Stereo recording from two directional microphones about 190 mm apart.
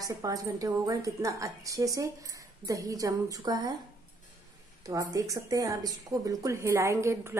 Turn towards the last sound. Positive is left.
turn(degrees=-15)  # may be behind; listen again after turning